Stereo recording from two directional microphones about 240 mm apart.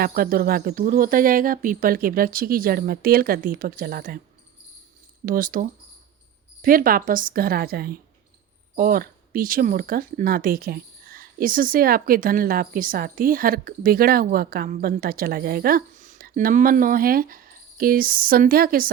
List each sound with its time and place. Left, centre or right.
0.0 s speech: right
5.2 s speech: right